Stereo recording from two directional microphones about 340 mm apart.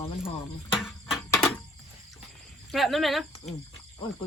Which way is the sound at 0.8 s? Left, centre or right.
Centre.